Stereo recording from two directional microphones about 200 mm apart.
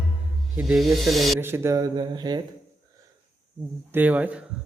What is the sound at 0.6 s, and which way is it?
Snake, 5° right (ahead or behind).